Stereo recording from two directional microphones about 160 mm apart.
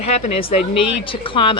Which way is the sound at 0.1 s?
40° left (ahead or behind).